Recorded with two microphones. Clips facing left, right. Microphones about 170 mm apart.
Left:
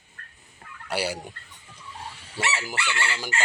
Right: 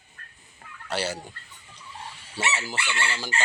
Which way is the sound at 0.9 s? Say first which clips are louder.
Left 1 dB; 10° left (ahead or behind).